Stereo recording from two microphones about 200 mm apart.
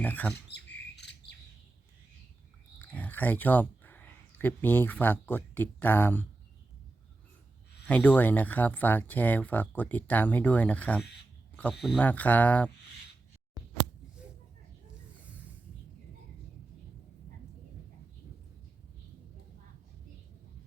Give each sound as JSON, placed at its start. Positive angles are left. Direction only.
{"t": 0.0, "sound": "speech", "side_deg": 10}
{"t": 0.5, "sound": "squawk", "side_deg": 55}
{"t": 2.7, "sound": "speech", "side_deg": 10}
{"t": 7.9, "sound": "speech", "side_deg": 5}
{"t": 13.6, "sound": "a sound", "side_deg": -15}